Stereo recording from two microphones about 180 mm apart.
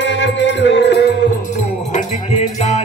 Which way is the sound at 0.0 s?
85° left.